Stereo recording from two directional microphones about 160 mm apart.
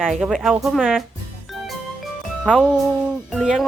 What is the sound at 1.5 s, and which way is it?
Music, centre (ahead or behind).